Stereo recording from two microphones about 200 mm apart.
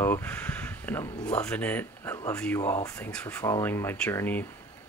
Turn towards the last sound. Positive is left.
turn(degrees=10)  # may be behind; listen again after turning